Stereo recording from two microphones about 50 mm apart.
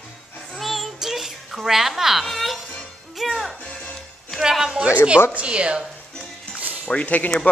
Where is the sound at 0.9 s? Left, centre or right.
Centre.